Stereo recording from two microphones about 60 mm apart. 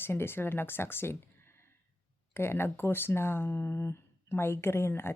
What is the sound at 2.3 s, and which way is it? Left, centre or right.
Speech, left.